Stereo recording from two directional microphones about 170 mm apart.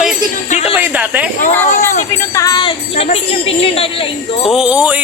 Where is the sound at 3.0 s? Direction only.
35° left (ahead or behind).